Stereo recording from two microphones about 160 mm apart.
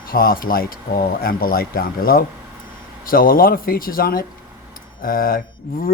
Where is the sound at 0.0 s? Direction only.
65° left (ahead or behind).